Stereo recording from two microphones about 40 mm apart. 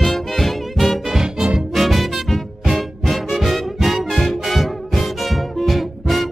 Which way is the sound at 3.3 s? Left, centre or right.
Centre.